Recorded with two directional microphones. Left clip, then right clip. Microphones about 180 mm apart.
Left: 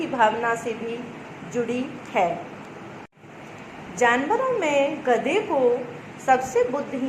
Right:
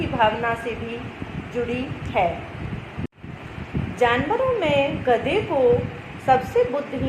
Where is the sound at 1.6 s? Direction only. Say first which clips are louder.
Even; 25° left (ahead or behind).